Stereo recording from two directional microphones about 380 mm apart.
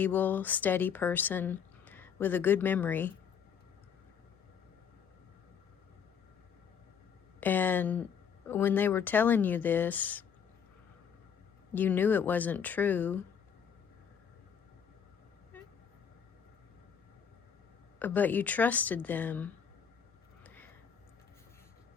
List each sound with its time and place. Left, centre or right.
0.0 s speech: centre
7.3 s speech: centre
11.7 s speech: centre
18.0 s speech: centre
20.4 s a sound: centre